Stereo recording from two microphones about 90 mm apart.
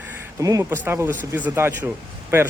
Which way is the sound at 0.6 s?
25° right (ahead or behind).